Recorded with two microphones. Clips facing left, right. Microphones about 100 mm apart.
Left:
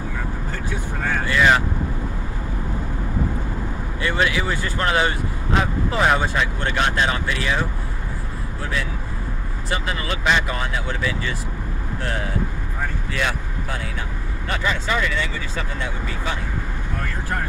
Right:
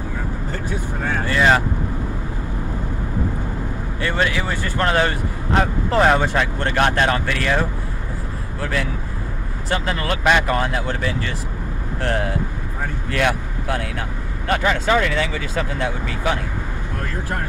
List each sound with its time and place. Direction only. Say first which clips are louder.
1.2 s speech: right 1 dB; 40° right (ahead or behind)
4.0 s speech: even; 45° right (ahead or behind)
9.7 s speech: right 3 dB; 55° right (ahead or behind); by 16.3 s 85° right